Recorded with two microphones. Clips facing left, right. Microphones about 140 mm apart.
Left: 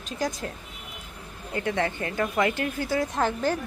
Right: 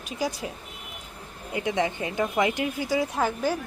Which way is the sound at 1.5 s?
15° right (ahead or behind).